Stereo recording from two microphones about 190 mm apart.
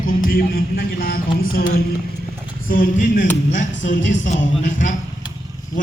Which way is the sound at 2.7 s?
45° left (ahead or behind).